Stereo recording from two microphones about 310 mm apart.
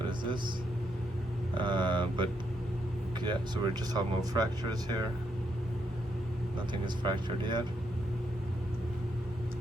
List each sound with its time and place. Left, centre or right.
1.5 s speech: centre
6.8 s speech: centre